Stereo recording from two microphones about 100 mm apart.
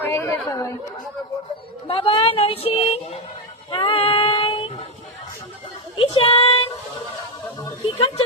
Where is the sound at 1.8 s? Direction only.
65° left (ahead or behind); by 3.2 s 80° left.